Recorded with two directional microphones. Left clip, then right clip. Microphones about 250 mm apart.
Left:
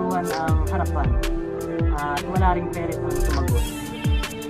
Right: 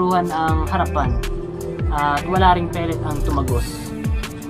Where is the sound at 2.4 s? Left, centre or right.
Centre.